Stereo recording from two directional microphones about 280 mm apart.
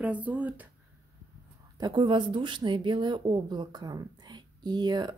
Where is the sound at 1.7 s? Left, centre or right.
Centre.